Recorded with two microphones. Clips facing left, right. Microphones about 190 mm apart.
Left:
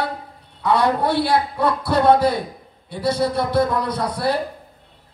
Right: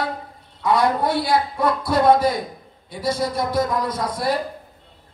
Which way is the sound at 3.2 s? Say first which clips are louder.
Left 3 dB; 65° left (ahead or behind).